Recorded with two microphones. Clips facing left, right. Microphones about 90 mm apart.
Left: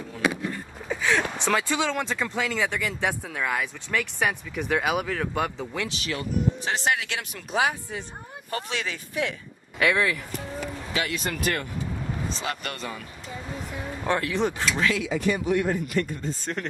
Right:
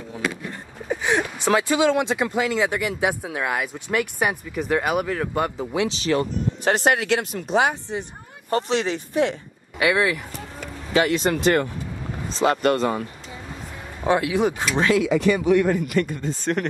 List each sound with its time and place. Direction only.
0.8 s a sound: 15° right (ahead or behind)
1.4 s speech: 5° right (ahead or behind)
5.7 s speech: 20° right (ahead or behind)
6.6 s speech: 55° right (ahead or behind)
7.3 s speech: 30° right (ahead or behind)
9.8 s speech: 5° right (ahead or behind)
10.9 s speech: 35° right (ahead or behind)
14.0 s speech: 10° right (ahead or behind)
15.0 s speech: 80° right